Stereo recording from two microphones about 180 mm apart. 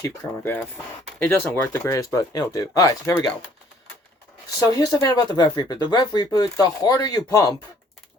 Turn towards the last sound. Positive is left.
turn(degrees=20)  # may be behind; listen again after turning